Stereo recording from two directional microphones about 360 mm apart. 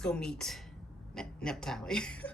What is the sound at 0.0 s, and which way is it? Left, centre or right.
Speech, centre.